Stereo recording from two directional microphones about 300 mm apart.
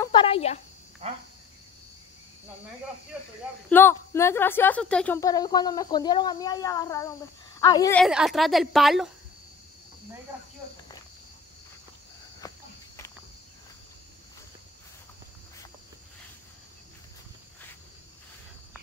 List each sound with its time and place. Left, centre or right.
0.0 s a sound: centre
1.0 s cricket: right
3.7 s a woman's voice: centre
8.0 s a woman's voice: centre
12.4 s cricket: centre